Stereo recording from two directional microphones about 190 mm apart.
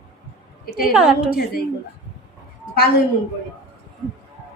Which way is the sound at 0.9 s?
Centre (ahead or behind).